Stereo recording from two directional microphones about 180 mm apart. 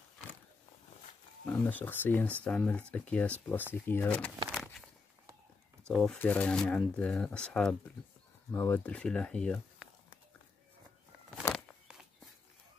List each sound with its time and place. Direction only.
1.4 s speech: 10° left (ahead or behind)
4.5 s walk: centre (ahead or behind)
5.9 s speech: 5° left (ahead or behind)
11.4 s a sound: 20° left (ahead or behind)